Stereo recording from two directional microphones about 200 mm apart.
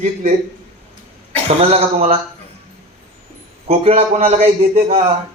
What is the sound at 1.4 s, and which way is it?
Speech, 30° right (ahead or behind).